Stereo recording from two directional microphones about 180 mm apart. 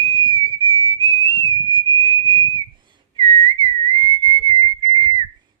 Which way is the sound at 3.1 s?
30° right (ahead or behind).